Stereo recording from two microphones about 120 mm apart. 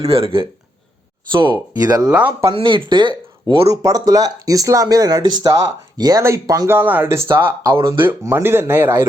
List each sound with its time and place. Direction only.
0.0 s speech: 50° right (ahead or behind)
2.0 s speech: 10° right (ahead or behind)
2.5 s speech: 45° right (ahead or behind)
3.7 s speech: 30° right (ahead or behind)